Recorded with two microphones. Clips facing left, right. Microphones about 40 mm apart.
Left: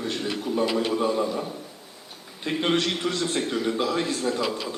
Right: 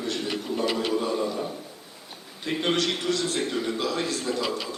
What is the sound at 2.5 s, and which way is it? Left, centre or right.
Speech, left.